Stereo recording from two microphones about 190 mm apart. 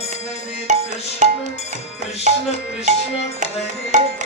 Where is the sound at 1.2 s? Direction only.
40° right (ahead or behind).